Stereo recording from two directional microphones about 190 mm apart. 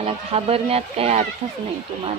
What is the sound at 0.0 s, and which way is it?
Speech, 30° right (ahead or behind).